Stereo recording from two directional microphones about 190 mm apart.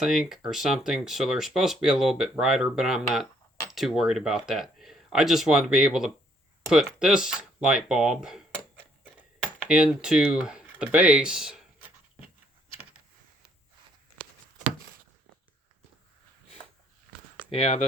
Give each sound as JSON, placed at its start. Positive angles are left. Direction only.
{"t": 0.0, "sound": "speech", "side_deg": 0}
{"t": 17.5, "sound": "speech", "side_deg": 30}